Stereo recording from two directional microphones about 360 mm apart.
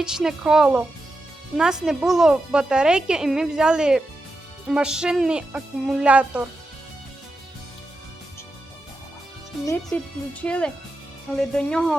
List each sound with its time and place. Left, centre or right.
0.0 s speech: centre
9.6 s speech: centre